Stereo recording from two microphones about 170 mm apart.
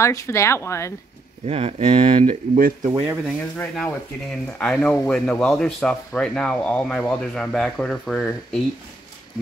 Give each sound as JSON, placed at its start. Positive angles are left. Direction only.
{"t": 0.0, "sound": "speech", "side_deg": 15}
{"t": 1.4, "sound": "speech", "side_deg": -35}
{"t": 3.5, "sound": "speech", "side_deg": 5}